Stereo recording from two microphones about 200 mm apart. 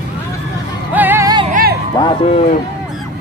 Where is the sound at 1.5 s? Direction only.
45° right (ahead or behind).